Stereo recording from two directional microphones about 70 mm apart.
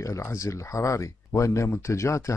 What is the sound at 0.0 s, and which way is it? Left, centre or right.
Speech, left.